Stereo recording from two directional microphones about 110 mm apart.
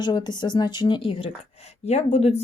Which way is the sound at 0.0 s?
40° left (ahead or behind).